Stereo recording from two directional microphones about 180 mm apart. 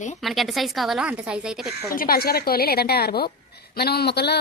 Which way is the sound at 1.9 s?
55° left (ahead or behind).